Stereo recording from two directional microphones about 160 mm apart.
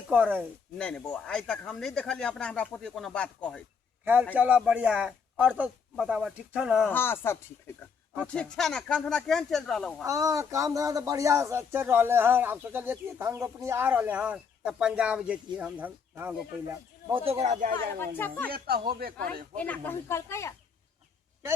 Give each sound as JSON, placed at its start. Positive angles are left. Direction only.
{"t": 0.1, "sound": "speech", "side_deg": -10}
{"t": 0.8, "sound": "speech", "side_deg": 5}
{"t": 4.0, "sound": "a man's voice", "side_deg": -10}
{"t": 6.9, "sound": "speech", "side_deg": 15}
{"t": 10.0, "sound": "speech", "side_deg": -20}
{"t": 17.2, "sound": "a man's voice", "side_deg": -45}
{"t": 18.0, "sound": "speech", "side_deg": 10}
{"t": 18.5, "sound": "speech", "side_deg": -70}
{"t": 19.5, "sound": "speech", "side_deg": 10}